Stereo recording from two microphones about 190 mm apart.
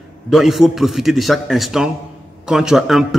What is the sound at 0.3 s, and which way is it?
A man's voice, centre (ahead or behind).